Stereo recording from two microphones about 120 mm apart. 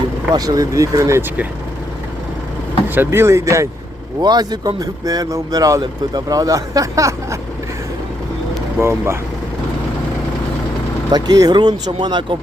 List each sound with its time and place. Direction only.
0.3 s speech: 30° right (ahead or behind)
2.9 s speech: 20° right (ahead or behind)
8.8 s speech: 20° right (ahead or behind)
11.1 s speech: 35° right (ahead or behind)